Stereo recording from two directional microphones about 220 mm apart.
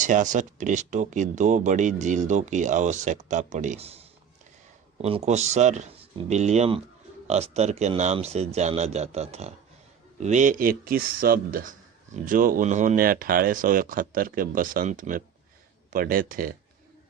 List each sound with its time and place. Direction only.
0.0 s a man's voice: 35° right (ahead or behind)
5.0 s a man's voice: 30° right (ahead or behind)